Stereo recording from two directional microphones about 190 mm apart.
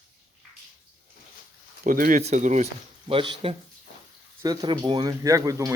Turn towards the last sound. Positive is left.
turn(degrees=-15)  # may be behind; listen again after turning